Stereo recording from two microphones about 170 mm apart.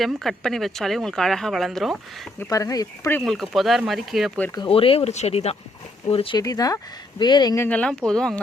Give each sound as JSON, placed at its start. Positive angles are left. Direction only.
{"t": 0.0, "sound": "speech", "side_deg": 0}
{"t": 2.4, "sound": "speech", "side_deg": 20}
{"t": 3.2, "sound": "speech", "side_deg": 5}
{"t": 4.5, "sound": "speech", "side_deg": 30}
{"t": 6.4, "sound": "speech", "side_deg": 20}